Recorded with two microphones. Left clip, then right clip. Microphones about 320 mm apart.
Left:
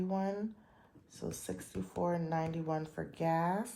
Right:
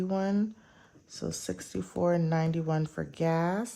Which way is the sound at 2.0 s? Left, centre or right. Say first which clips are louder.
Right 7 dB; right.